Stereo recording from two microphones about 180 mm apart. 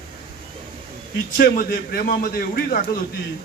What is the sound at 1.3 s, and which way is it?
A man's voice, 55° left (ahead or behind).